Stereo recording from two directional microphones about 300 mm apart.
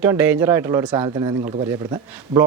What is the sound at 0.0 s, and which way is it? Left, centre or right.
A man's voice, centre.